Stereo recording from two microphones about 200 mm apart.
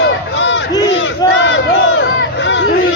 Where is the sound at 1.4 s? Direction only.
70° left (ahead or behind).